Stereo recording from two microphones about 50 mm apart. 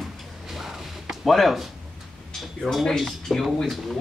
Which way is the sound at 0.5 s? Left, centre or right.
Centre.